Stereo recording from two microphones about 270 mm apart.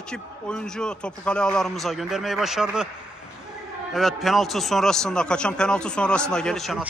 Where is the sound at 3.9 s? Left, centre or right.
Centre.